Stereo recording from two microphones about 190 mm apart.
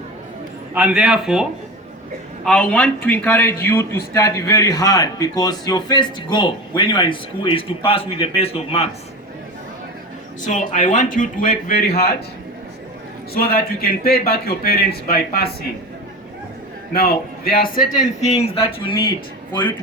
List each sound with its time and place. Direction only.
0.7 s speech: 5° right (ahead or behind)
2.5 s a man's voice: 5° left (ahead or behind); by 8.9 s 30° left (ahead or behind)
10.4 s a man's voice: 40° left (ahead or behind)
13.3 s a man's voice: 50° left (ahead or behind)
17.4 s speech: 50° left (ahead or behind); by 18.9 s 30° left (ahead or behind)